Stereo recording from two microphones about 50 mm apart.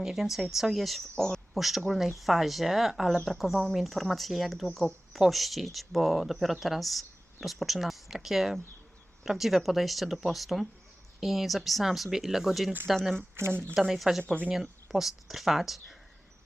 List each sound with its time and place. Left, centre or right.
0.0 s speech: centre
1.1 s speech: centre
1.5 s speech: centre
13.3 s speech: right
13.7 s speech: centre